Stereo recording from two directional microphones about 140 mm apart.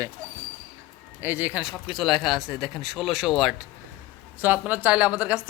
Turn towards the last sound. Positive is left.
turn(degrees=-5)  # may be behind; listen again after turning